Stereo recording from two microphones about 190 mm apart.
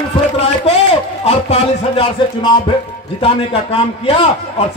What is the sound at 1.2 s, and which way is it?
Speech, 35° left (ahead or behind).